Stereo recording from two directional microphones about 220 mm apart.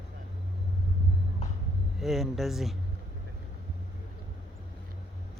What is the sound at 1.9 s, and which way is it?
Speech, centre (ahead or behind).